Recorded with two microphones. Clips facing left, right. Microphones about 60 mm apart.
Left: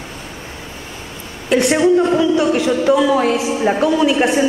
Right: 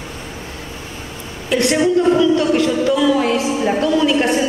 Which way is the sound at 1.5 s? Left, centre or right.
Centre.